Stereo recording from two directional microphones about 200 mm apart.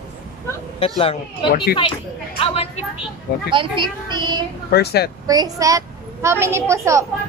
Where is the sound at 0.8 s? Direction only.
30° left (ahead or behind).